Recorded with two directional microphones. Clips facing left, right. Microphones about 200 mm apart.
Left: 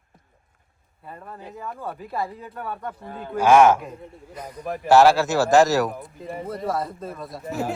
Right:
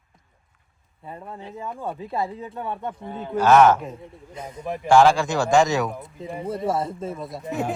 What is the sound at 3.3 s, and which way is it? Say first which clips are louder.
A man's voice: even; 10° left (ahead or behind).